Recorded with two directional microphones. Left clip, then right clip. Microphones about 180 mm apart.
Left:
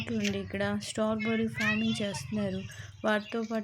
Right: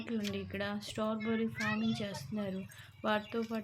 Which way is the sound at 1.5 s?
60° right (ahead or behind).